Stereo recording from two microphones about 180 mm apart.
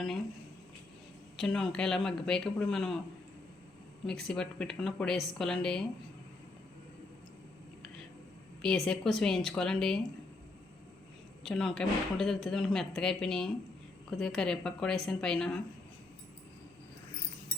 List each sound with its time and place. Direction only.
1.4 s speech: 5° left (ahead or behind)
4.0 s speech: 5° left (ahead or behind)
8.6 s speech: 5° left (ahead or behind)
11.4 s speech: centre (ahead or behind)